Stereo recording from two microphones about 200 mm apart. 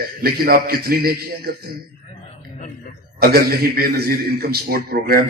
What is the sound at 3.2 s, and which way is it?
A man's voice, 50° right (ahead or behind).